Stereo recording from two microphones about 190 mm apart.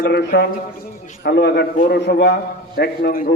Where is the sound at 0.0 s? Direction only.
55° left (ahead or behind).